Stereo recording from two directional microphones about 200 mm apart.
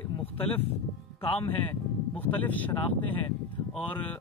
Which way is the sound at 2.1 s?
10° left (ahead or behind).